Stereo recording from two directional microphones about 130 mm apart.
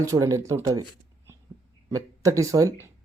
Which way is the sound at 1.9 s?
25° right (ahead or behind).